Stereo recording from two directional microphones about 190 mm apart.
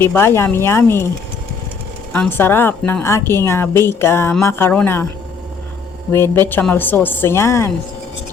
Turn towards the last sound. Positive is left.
turn(degrees=15)  # may be behind; listen again after turning